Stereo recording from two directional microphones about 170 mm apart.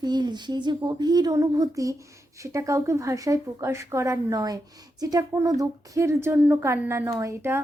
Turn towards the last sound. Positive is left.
turn(degrees=-15)  # may be behind; listen again after turning